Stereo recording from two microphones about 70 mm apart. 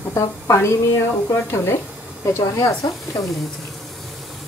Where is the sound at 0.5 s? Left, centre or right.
Left.